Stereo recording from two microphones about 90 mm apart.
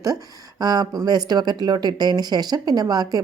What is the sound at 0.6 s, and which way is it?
A woman's voice, 45° right (ahead or behind).